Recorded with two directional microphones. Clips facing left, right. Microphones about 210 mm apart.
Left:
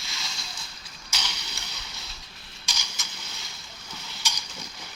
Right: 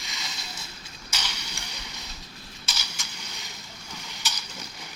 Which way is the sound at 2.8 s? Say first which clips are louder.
Right 1 dB; 10° right (ahead or behind).